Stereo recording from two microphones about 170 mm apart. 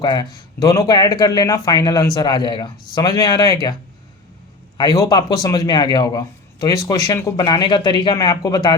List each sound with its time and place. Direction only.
0.0 s speech: 25° left (ahead or behind)
4.8 s speech: 20° left (ahead or behind)